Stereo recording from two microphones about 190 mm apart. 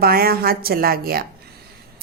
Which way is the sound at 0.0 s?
55° right (ahead or behind).